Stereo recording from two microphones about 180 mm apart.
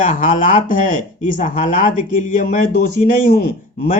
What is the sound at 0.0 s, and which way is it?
Speech, 45° left (ahead or behind).